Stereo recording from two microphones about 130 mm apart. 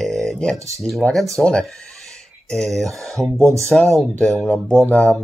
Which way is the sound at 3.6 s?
Centre (ahead or behind).